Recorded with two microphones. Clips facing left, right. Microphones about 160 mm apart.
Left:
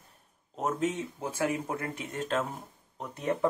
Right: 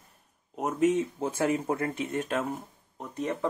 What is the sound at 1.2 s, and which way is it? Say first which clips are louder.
Speech: right 3 dB; 25° right (ahead or behind).